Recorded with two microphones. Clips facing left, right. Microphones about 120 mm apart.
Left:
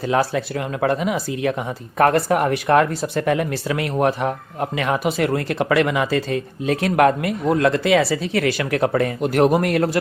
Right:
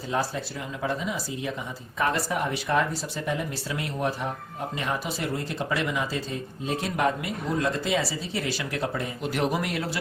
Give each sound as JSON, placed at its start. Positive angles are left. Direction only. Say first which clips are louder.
{"t": 0.1, "sound": "speech", "louder": "left 8 dB", "side_deg": 75}